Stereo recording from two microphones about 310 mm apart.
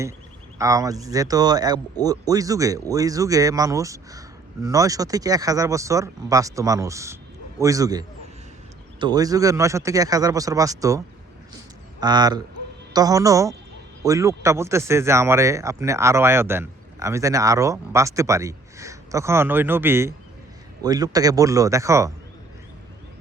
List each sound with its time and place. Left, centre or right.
0.6 s speech: centre